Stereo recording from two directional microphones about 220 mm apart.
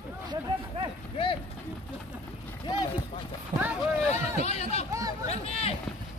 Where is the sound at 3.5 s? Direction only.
20° right (ahead or behind).